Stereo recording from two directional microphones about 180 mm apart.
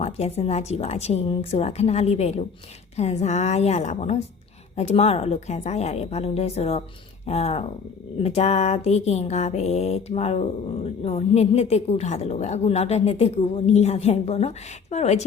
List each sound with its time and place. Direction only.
0.0 s a woman's voice: 35° left (ahead or behind)